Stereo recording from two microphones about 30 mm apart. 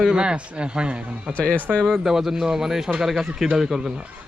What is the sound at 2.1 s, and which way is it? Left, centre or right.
Speech, centre.